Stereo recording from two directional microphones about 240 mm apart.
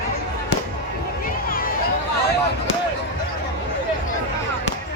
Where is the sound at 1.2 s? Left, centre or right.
Left.